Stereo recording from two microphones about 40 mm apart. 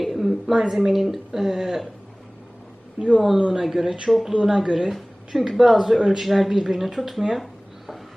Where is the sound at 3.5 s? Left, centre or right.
Centre.